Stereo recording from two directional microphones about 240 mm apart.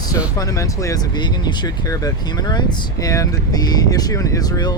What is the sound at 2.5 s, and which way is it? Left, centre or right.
Speech, centre.